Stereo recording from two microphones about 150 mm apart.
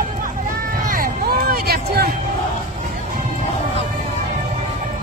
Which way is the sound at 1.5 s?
90° right.